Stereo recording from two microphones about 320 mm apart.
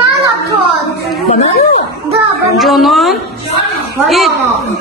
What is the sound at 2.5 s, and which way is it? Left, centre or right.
Speech, centre.